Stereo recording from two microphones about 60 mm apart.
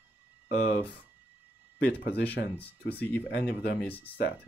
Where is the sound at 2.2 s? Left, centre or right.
Left.